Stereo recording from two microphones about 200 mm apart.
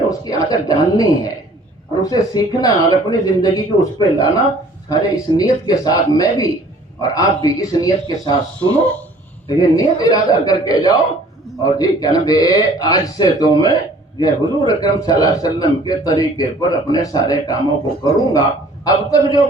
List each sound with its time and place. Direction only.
0.1 s a man's voice: 15° left (ahead or behind)
8.7 s a man's voice: 10° left (ahead or behind)
9.5 s a man's voice: 20° left (ahead or behind)
18.9 s a man's voice: 15° left (ahead or behind)